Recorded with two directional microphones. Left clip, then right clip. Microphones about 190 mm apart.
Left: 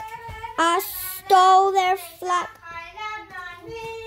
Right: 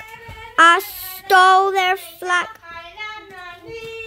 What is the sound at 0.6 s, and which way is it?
Child singing, centre (ahead or behind).